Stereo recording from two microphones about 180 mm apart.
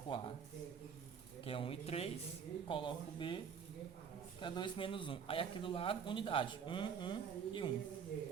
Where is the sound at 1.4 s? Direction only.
30° left (ahead or behind).